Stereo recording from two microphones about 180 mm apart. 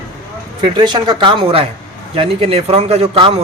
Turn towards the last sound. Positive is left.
turn(degrees=-35)  # may be behind; listen again after turning